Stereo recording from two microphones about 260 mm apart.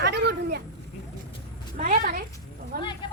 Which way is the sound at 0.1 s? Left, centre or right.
Right.